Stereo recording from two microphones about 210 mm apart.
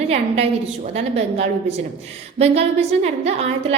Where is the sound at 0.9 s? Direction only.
30° right (ahead or behind).